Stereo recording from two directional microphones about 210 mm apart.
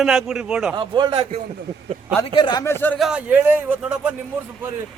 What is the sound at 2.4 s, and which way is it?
Speech, 20° left (ahead or behind).